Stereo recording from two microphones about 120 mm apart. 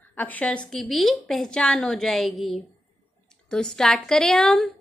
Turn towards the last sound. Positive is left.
turn(degrees=5)  # may be behind; listen again after turning